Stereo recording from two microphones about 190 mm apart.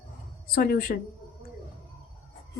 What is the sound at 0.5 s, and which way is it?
Speech, 55° left (ahead or behind).